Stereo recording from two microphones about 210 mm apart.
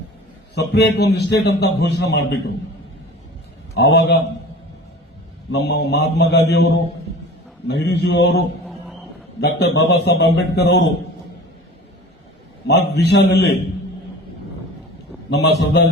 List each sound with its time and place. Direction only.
0.5 s a man's voice: 55° left (ahead or behind)
3.8 s a man's voice: 50° left (ahead or behind)
5.5 s a man's voice: 55° left (ahead or behind)
7.7 s a man's voice: 55° left (ahead or behind)
9.4 s a man's voice: 55° left (ahead or behind)
12.6 s a man's voice: 50° left (ahead or behind)
15.3 s a man's voice: 55° left (ahead or behind)